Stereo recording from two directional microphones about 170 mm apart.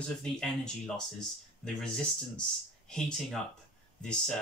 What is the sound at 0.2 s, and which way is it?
Speech, 5° left (ahead or behind).